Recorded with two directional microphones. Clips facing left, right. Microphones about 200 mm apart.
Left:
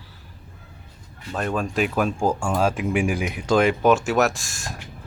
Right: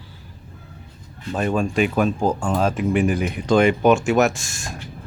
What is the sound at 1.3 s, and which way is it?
Speech, centre (ahead or behind).